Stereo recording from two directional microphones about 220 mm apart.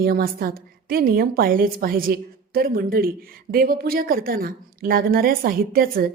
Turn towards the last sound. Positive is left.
turn(degrees=-40)  # may be behind; listen again after turning